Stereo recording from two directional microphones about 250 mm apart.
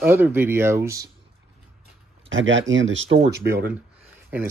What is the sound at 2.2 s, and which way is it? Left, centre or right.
Speech, right.